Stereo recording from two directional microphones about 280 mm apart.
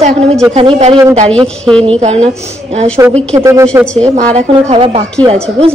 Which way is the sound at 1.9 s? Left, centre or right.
Right.